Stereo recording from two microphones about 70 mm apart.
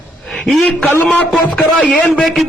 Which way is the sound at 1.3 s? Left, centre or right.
Centre.